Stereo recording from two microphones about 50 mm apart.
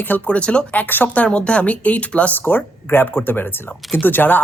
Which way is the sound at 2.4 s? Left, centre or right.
Left.